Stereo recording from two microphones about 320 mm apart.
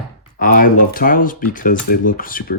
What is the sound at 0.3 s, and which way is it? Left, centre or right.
Speech, left.